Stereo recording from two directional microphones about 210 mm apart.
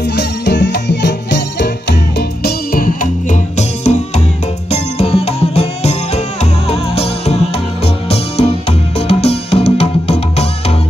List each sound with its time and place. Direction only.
0.1 s music: 55° left (ahead or behind); by 10.4 s 30° left (ahead or behind)